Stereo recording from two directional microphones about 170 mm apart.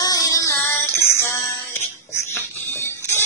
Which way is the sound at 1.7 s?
15° left (ahead or behind).